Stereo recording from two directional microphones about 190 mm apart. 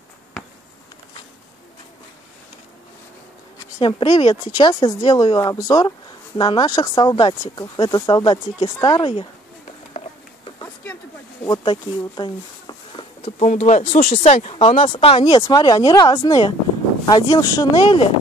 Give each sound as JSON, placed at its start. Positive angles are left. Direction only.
{"t": 3.7, "sound": "speech", "side_deg": 25}
{"t": 10.6, "sound": "a sound", "side_deg": 10}
{"t": 11.4, "sound": "speech", "side_deg": 25}
{"t": 13.4, "sound": "speech", "side_deg": 35}